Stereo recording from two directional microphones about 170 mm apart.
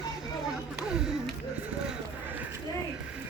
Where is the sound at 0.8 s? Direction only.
5° right (ahead or behind).